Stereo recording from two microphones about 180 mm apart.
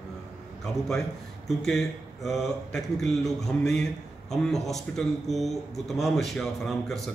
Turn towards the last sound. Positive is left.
turn(degrees=0)  # may be behind; listen again after turning